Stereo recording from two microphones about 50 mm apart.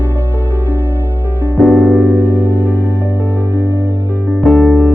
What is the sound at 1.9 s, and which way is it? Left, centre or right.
Music, left.